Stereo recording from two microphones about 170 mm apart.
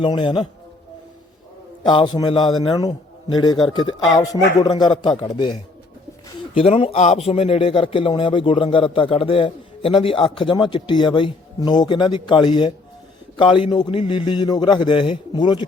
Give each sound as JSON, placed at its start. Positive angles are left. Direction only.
{"t": 0.0, "sound": "a man's voice", "side_deg": 25}
{"t": 1.8, "sound": "a man's voice", "side_deg": 25}
{"t": 6.5, "sound": "a man's voice", "side_deg": 35}